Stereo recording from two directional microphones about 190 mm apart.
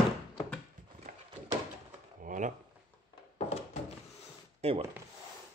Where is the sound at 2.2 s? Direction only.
45° right (ahead or behind).